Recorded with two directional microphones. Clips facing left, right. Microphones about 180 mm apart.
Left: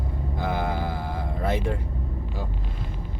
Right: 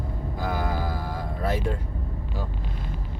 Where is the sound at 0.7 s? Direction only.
20° left (ahead or behind).